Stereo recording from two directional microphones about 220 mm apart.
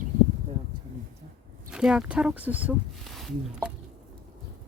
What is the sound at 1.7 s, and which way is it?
Speech, 5° right (ahead or behind).